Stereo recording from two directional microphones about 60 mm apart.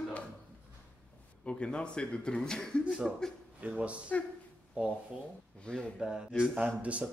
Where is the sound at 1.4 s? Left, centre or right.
Centre.